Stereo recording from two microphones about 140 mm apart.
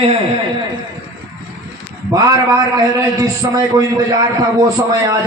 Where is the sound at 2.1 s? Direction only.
25° right (ahead or behind).